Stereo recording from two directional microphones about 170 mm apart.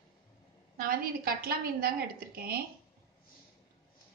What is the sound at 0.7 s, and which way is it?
A woman's voice, 60° right (ahead or behind).